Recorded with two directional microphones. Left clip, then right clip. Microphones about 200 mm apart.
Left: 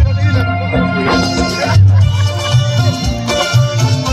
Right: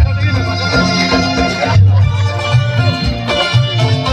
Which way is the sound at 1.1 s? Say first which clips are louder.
Right 1 dB; 35° right (ahead or behind).